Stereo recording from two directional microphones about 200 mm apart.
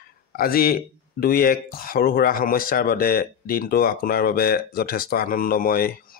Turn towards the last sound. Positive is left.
turn(degrees=45)  # may be behind; listen again after turning